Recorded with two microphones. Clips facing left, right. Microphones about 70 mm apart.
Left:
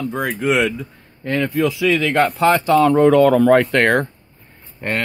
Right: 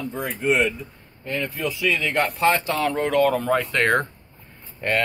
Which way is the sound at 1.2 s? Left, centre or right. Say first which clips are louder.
Left 7 dB; left.